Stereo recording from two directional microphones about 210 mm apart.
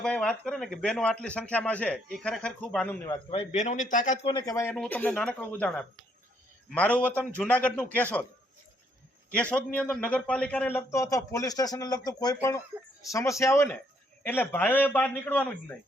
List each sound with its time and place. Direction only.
0.0 s a man's voice: 5° left (ahead or behind)
3.1 s a man's voice: 30° left (ahead or behind)
4.3 s a man's voice: 20° left (ahead or behind)
4.7 s a man's voice: 5° left (ahead or behind)
9.3 s a man's voice: 5° left (ahead or behind)